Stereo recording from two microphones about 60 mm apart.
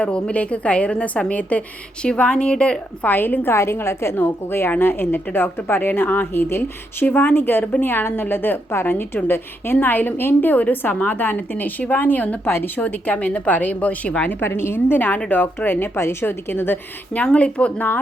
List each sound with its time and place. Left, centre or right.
0.0 s a woman's voice: centre
3.1 s a woman's voice: left
3.5 s a woman's voice: left
4.1 s a woman's voice: left
12.5 s a woman's voice: left
14.4 s a woman's voice: left
17.2 s a woman's voice: left